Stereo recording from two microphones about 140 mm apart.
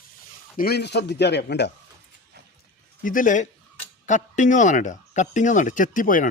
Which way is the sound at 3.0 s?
70° left (ahead or behind).